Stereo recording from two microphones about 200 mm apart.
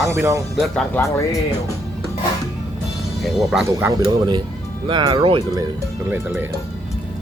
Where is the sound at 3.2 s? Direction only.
Centre (ahead or behind).